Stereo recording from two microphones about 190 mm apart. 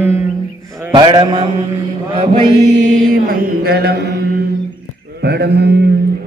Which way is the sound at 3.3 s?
55° right (ahead or behind).